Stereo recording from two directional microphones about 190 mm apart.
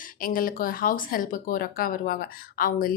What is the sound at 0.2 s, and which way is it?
A woman's voice, 50° left (ahead or behind).